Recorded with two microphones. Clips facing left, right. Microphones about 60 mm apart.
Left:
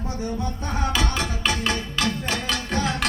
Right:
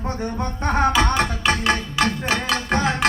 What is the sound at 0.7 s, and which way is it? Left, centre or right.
Music, right.